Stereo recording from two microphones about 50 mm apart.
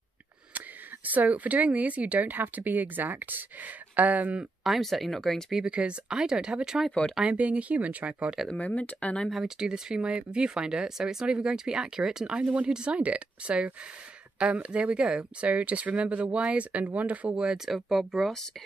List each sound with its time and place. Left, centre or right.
0.6 s speech: right
4.6 s speech: centre
5.7 s speech: right
7.2 s speech: right
8.5 s speech: left
9.3 s speech: centre; by 17.4 s right
17.6 s speech: centre